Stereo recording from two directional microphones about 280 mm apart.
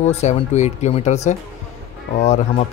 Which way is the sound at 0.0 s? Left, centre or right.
Left.